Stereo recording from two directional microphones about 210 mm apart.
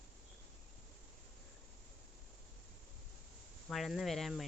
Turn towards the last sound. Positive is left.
turn(degrees=0)  # may be behind; listen again after turning